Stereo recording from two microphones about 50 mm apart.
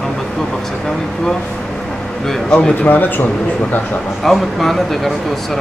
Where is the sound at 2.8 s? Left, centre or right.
Left.